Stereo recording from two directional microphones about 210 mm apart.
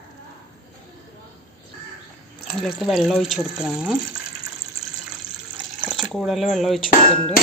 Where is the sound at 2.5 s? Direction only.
Centre (ahead or behind).